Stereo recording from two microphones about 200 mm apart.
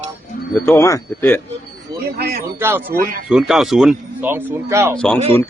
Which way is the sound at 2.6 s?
10° right (ahead or behind).